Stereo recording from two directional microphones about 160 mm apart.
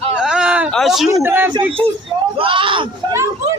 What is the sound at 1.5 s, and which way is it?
Speech, 35° right (ahead or behind).